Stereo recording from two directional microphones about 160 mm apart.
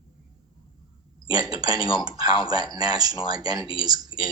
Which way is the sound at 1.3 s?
25° right (ahead or behind).